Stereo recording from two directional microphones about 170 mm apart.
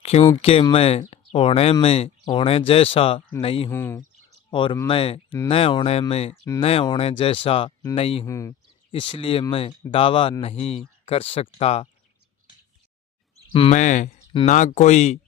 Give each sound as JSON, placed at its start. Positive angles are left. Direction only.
{"t": 0.0, "sound": "speech", "side_deg": 40}
{"t": 3.7, "sound": "speech", "side_deg": 15}
{"t": 4.5, "sound": "speech", "side_deg": 30}
{"t": 8.3, "sound": "speech", "side_deg": 15}
{"t": 8.9, "sound": "speech", "side_deg": 30}
{"t": 13.5, "sound": "speech", "side_deg": 30}
{"t": 13.7, "sound": "speech", "side_deg": 45}